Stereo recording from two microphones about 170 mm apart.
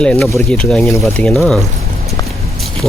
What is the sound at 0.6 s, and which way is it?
Speech, centre (ahead or behind).